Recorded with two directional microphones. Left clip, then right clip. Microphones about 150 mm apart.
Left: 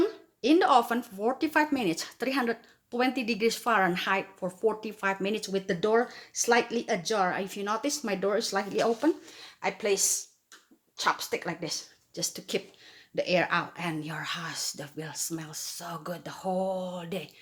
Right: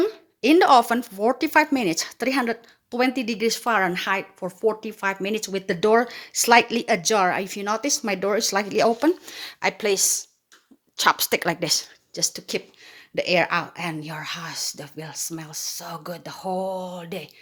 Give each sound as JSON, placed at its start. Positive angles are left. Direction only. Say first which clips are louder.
{"t": 0.0, "sound": "speech", "louder": "right 5 dB", "side_deg": -45}
{"t": 12.1, "sound": "speech", "louder": "right 6 dB", "side_deg": -40}